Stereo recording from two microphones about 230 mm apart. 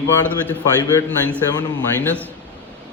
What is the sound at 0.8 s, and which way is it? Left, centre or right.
A man's voice, centre.